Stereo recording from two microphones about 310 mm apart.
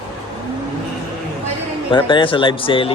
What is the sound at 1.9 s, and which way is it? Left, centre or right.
Speech, centre.